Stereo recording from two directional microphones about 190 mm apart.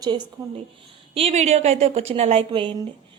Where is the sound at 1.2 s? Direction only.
35° right (ahead or behind).